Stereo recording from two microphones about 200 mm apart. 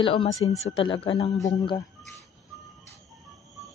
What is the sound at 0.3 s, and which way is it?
Speech, 15° left (ahead or behind).